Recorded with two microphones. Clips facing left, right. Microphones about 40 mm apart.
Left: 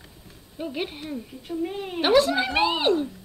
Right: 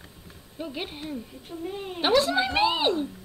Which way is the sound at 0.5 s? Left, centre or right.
Centre.